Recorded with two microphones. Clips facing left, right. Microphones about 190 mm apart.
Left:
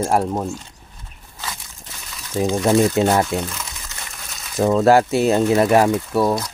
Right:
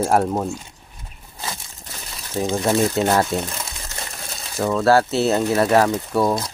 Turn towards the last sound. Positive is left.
turn(degrees=5)  # may be behind; listen again after turning